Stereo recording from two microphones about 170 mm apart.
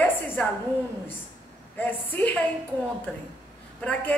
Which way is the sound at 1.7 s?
10° left (ahead or behind).